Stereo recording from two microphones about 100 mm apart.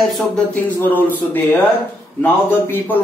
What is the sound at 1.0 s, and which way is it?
Speech, 20° left (ahead or behind).